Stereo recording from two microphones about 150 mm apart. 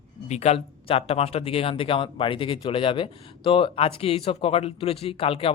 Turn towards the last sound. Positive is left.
turn(degrees=40)  # may be behind; listen again after turning